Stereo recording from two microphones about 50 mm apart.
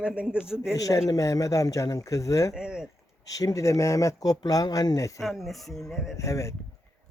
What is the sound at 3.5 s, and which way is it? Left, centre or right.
Speech, left.